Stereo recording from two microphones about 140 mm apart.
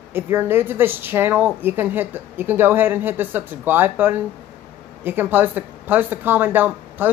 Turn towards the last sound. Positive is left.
turn(degrees=-15)  # may be behind; listen again after turning